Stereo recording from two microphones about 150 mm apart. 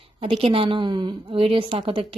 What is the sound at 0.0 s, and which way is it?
Speech, 40° right (ahead or behind).